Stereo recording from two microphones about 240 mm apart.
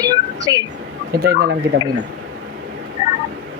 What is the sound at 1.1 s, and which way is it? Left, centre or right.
Speech, right.